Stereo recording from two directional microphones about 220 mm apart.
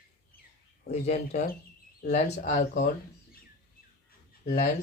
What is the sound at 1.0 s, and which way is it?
Speech, 35° left (ahead or behind).